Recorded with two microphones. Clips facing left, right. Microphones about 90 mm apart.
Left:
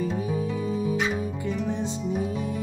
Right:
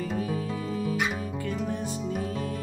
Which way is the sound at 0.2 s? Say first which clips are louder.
Left 3 dB; 20° left (ahead or behind).